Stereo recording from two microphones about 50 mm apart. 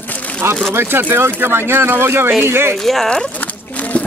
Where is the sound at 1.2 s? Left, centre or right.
Right.